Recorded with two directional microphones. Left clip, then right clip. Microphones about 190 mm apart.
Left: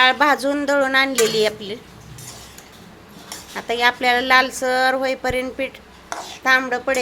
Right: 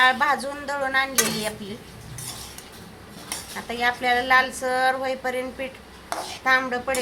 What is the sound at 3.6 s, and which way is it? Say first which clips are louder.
A woman's voice: left 6 dB; 50° left (ahead or behind).